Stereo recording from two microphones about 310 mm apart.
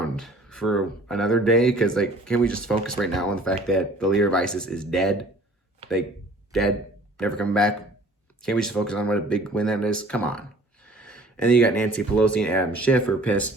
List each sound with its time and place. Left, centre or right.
0.0 s speech: centre
6.5 s a man's voice: centre
10.8 s a sound: centre
11.2 s speech: centre